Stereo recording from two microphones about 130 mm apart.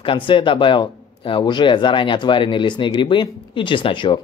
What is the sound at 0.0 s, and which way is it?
Speech, 40° left (ahead or behind).